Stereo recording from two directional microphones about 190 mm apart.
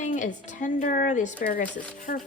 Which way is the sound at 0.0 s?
40° left (ahead or behind).